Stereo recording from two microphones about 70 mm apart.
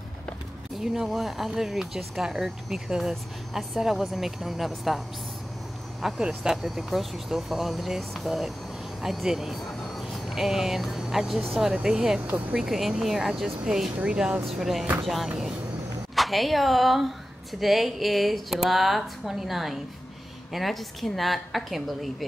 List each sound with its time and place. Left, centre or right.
0.7 s speech: centre
12.3 s speech: right
12.5 s speech: centre